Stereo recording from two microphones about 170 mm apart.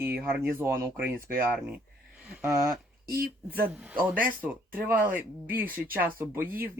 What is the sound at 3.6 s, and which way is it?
Speech, 10° right (ahead or behind).